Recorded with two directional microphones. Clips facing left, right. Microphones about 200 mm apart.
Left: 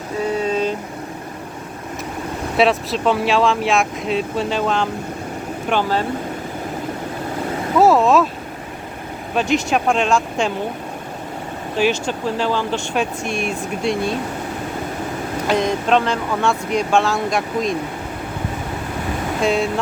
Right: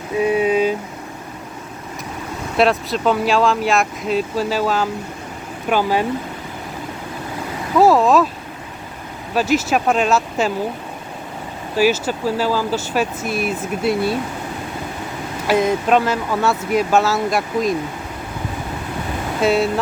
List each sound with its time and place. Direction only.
0.2 s vehicle: 15° right (ahead or behind)
2.6 s speech: centre (ahead or behind)
7.8 s speech: centre (ahead or behind)
9.3 s speech: 5° right (ahead or behind)
11.8 s speech: 5° right (ahead or behind)
15.4 s speech: 5° right (ahead or behind)
19.4 s speech: 5° right (ahead or behind)